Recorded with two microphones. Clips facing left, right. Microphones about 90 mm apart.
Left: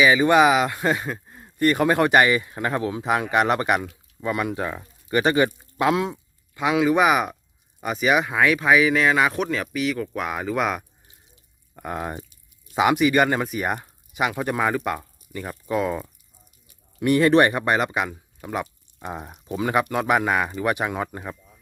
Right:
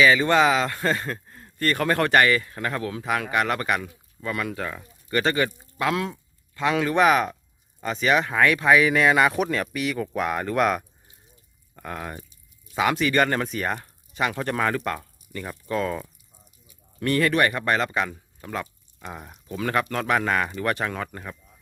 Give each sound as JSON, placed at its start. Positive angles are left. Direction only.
{"t": 0.0, "sound": "speech", "side_deg": 15}
{"t": 11.7, "sound": "speech", "side_deg": 15}